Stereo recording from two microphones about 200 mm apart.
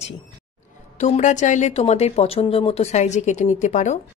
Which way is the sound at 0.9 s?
35° left (ahead or behind).